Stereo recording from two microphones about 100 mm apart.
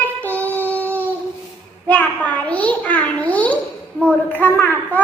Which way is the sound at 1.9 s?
15° left (ahead or behind).